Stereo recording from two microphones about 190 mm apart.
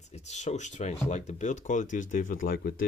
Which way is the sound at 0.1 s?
35° left (ahead or behind).